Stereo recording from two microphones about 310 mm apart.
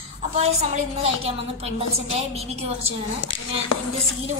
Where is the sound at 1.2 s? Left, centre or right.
Centre.